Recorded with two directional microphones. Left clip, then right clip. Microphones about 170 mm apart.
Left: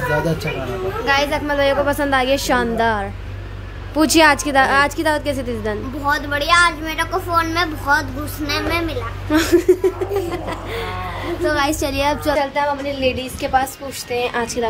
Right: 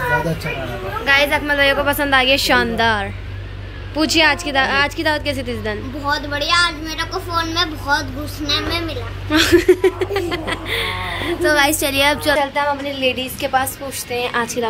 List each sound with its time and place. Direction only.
1.0 s speech: 15° left (ahead or behind)
3.9 s a woman's voice: 35° left (ahead or behind); by 9.5 s 15° left (ahead or behind)
9.5 s speech: 5° left (ahead or behind)